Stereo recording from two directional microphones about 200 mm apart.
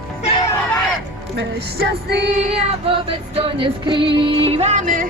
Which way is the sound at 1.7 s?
55° right (ahead or behind).